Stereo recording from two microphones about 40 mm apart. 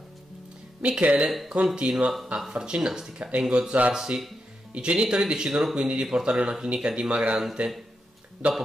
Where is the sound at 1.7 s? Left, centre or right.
Right.